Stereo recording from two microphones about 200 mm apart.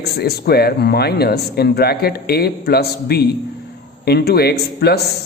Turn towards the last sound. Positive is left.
turn(degrees=55)  # may be behind; listen again after turning